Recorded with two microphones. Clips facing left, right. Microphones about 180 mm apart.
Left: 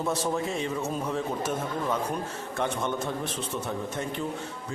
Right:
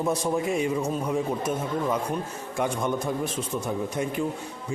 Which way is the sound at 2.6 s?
10° right (ahead or behind).